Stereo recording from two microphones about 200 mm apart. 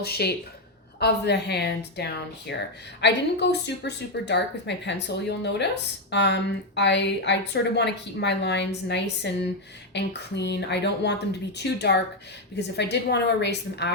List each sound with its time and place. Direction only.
0.0 s a woman's voice: 55° left (ahead or behind)